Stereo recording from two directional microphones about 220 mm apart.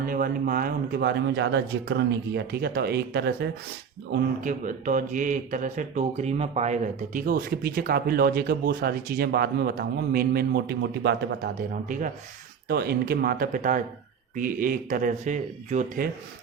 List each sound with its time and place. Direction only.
0.0 s speech: 40° right (ahead or behind)
4.1 s speech: 35° right (ahead or behind)
11.9 s speech: 35° right (ahead or behind)